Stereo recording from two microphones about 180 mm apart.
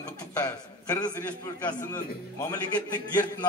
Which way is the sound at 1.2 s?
10° left (ahead or behind).